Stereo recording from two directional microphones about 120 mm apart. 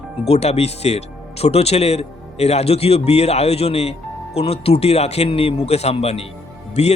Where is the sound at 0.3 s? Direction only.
60° left (ahead or behind).